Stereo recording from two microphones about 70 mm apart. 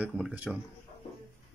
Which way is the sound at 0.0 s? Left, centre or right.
Centre.